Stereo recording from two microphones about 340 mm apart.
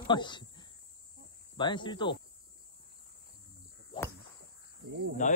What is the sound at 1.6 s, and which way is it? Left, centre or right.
Speech, centre.